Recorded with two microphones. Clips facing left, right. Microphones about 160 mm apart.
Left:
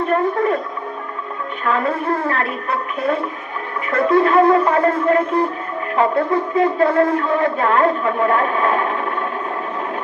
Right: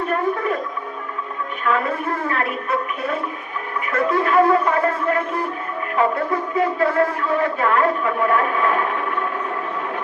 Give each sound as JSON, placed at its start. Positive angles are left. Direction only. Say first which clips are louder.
{"t": 0.1, "sound": "speech", "louder": "left 5 dB", "side_deg": 35}
{"t": 1.6, "sound": "a woman's voice", "louder": "left 2 dB", "side_deg": 30}